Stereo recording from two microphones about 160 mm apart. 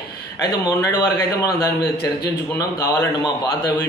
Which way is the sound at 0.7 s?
15° left (ahead or behind).